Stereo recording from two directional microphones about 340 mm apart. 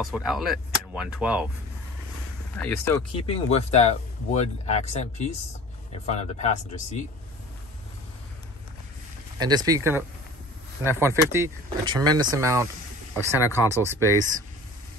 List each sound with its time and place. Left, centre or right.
0.0 s speech: centre
2.6 s speech: centre
9.4 s speech: centre
13.4 s speech: centre